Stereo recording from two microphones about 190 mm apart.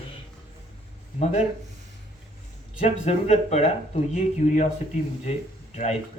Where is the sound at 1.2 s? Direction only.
35° left (ahead or behind).